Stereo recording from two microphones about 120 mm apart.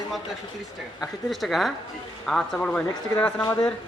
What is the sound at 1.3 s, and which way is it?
A man's voice, centre (ahead or behind).